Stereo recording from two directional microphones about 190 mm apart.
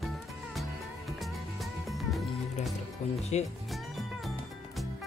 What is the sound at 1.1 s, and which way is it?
Music, centre (ahead or behind).